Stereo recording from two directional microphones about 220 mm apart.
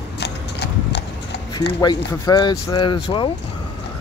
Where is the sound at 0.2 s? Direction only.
50° left (ahead or behind).